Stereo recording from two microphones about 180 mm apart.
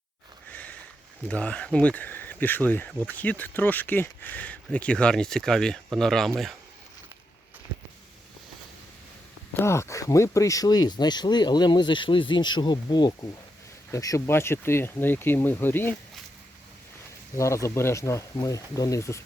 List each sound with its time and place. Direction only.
0.5 s sniff: 10° left (ahead or behind)
1.3 s speech: 5° left (ahead or behind)
9.6 s speech: 15° left (ahead or behind)
17.3 s speech: 15° left (ahead or behind)